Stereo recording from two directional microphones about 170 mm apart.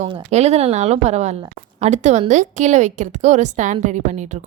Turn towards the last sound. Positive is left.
turn(degrees=-45)  # may be behind; listen again after turning